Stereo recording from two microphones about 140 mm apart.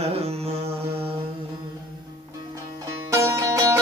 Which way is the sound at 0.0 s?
45° right (ahead or behind).